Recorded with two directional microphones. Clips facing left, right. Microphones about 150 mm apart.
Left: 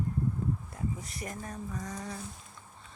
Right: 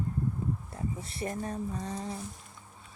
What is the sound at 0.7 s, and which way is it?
Speech, 30° right (ahead or behind).